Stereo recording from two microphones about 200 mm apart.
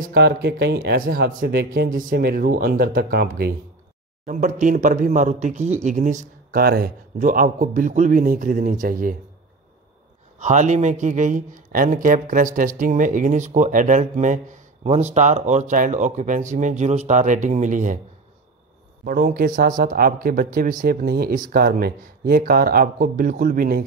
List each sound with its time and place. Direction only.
0.0 s speech: 55° right (ahead or behind)
4.3 s speech: 40° right (ahead or behind)
10.4 s speech: 35° right (ahead or behind)
19.0 s speech: 45° right (ahead or behind)